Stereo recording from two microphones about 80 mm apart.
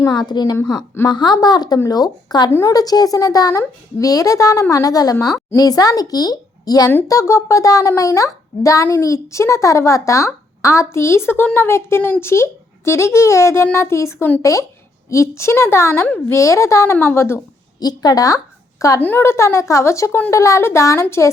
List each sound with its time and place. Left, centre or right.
0.1 s a woman's voice: left
2.5 s speech: left
2.7 s speech: left
7.1 s speech: left
17.7 s speech: left
18.9 s speech: left